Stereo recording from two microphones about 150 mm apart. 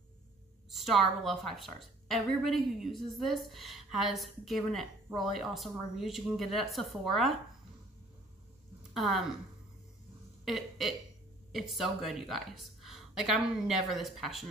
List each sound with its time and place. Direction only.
0.7 s a woman's voice: centre (ahead or behind)
8.9 s a woman's voice: centre (ahead or behind)
10.4 s a woman's voice: centre (ahead or behind)